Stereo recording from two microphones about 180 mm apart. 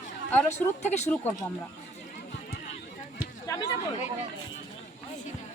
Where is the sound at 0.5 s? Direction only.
40° left (ahead or behind).